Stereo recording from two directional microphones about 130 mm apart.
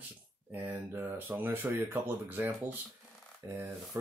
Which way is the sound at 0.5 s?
15° right (ahead or behind).